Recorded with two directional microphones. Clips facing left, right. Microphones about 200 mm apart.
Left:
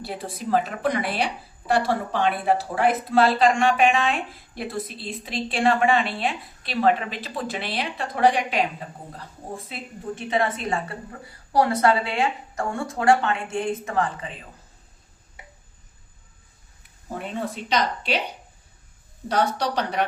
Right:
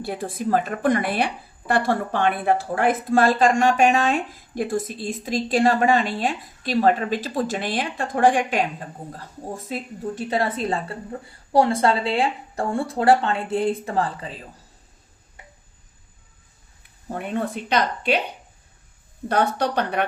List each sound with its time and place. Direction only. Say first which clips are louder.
0.0 s a woman's voice: right 5 dB; 50° right (ahead or behind)
10.2 s speech: even; 35° right (ahead or behind)
17.3 s speech: right 3 dB; 55° right (ahead or behind)
19.3 s a woman's voice: right 2 dB; 55° right (ahead or behind)